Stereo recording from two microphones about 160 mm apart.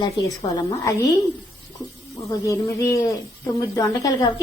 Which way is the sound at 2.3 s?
20° left (ahead or behind).